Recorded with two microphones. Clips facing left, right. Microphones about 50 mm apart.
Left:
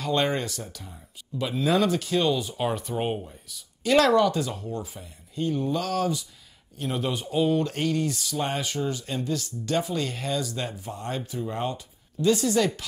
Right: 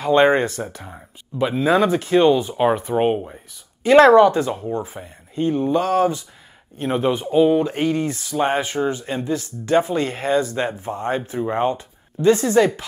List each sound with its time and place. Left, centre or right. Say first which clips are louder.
0.0 s speech: right 10 dB; right